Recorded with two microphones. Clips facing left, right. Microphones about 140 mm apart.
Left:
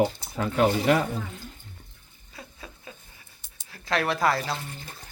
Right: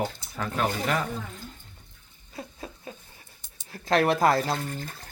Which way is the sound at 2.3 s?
45° right (ahead or behind).